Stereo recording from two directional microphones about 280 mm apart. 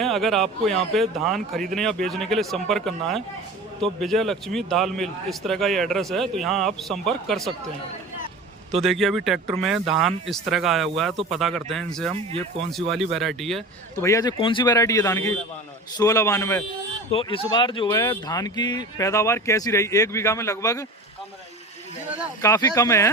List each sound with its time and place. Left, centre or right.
0.0 s a man's voice: centre
8.8 s a man's voice: centre
12.1 s speech: centre
13.1 s a man's voice: centre
14.1 s speech: centre
22.4 s speech: centre